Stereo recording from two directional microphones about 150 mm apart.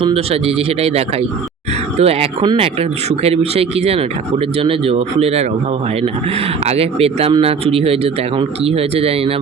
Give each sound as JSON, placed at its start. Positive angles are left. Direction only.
{"t": 0.1, "sound": "speech", "side_deg": -40}
{"t": 6.7, "sound": "speech", "side_deg": -40}